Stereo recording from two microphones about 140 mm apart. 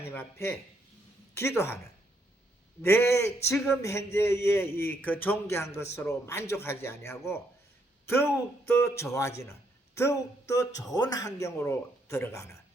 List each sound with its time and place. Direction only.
0.0 s a man's voice: 15° left (ahead or behind)
2.8 s a man's voice: 15° left (ahead or behind)